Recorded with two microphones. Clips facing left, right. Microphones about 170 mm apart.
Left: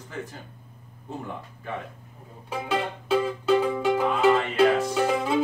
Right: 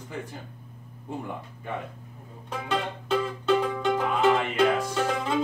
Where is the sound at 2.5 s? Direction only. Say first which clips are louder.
Left 2 dB; 5° left (ahead or behind).